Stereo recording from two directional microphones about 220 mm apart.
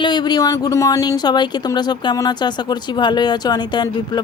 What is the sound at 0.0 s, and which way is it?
Speech, 20° left (ahead or behind).